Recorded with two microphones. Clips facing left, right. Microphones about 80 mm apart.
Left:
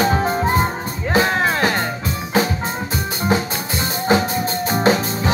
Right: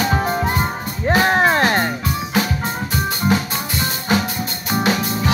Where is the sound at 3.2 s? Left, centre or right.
Left.